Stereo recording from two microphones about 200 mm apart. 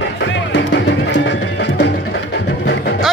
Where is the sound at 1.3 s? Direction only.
60° left (ahead or behind).